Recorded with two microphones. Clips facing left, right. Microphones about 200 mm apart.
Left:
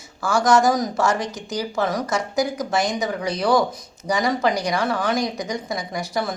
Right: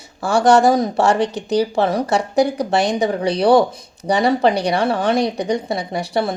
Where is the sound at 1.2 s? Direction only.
65° right (ahead or behind).